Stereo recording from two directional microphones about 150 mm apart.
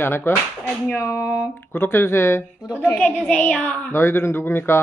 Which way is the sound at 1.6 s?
15° left (ahead or behind).